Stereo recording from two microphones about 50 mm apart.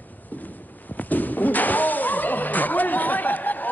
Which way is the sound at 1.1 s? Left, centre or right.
Left.